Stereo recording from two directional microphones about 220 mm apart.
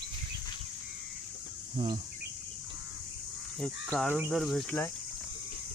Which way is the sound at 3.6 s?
Centre (ahead or behind).